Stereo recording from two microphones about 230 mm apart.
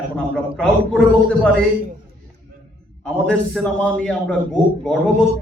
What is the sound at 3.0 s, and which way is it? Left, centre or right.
A man's voice, centre.